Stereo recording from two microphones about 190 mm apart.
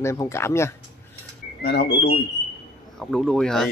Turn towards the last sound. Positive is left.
turn(degrees=0)  # may be behind; listen again after turning